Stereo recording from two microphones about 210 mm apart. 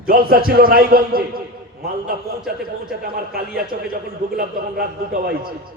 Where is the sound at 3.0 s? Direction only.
45° right (ahead or behind).